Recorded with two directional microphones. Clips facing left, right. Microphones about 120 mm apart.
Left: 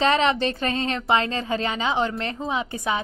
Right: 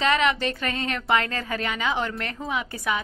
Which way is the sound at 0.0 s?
30° left (ahead or behind).